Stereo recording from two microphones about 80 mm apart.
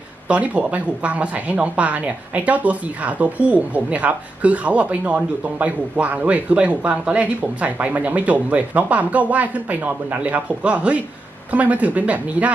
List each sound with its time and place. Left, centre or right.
0.3 s speech: centre